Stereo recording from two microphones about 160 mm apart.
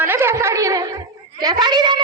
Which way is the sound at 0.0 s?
15° right (ahead or behind).